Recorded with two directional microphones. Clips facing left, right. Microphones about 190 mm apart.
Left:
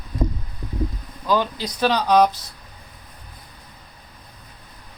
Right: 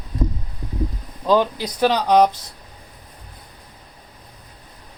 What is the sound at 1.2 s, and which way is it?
Speech, 15° right (ahead or behind).